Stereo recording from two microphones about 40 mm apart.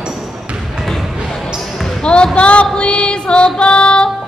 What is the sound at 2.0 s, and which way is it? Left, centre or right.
Speech, left.